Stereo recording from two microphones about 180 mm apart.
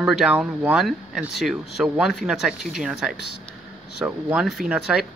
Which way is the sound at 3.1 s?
70° left (ahead or behind).